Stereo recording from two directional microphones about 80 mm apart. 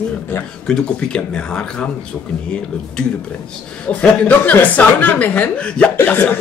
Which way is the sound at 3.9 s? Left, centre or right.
Centre.